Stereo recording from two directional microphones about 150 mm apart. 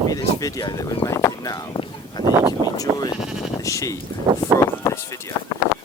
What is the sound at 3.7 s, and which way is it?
Speech, 20° left (ahead or behind).